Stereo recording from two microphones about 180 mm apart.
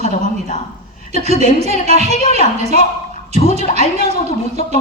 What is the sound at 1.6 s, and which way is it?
Speech, 35° right (ahead or behind).